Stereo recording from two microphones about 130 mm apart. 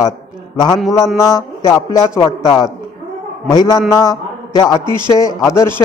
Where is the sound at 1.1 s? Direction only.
25° left (ahead or behind).